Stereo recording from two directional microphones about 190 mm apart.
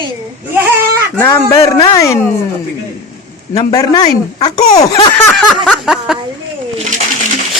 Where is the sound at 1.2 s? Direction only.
10° left (ahead or behind).